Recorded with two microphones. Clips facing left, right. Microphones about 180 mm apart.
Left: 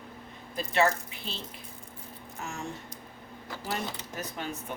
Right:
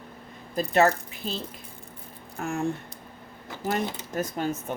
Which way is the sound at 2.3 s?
55° right (ahead or behind).